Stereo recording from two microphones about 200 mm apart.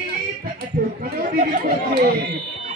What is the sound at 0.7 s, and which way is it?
Chatter, 45° right (ahead or behind).